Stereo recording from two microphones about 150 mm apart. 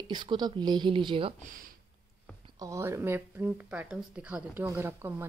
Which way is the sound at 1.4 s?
65° right (ahead or behind).